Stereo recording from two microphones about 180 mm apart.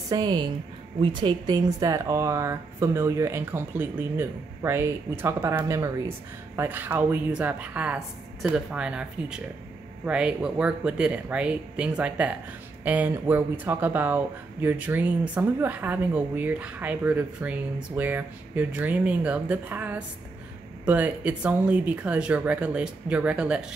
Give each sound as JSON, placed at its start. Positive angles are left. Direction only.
{"t": 0.1, "sound": "a woman's voice", "side_deg": -20}